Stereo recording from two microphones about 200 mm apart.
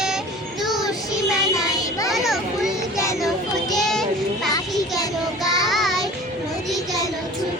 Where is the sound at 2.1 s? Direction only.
Centre (ahead or behind).